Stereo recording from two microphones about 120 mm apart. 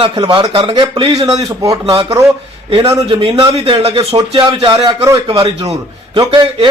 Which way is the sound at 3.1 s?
45° right (ahead or behind).